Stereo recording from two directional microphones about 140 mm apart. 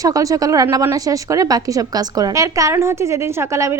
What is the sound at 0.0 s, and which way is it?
A woman's voice, 25° right (ahead or behind).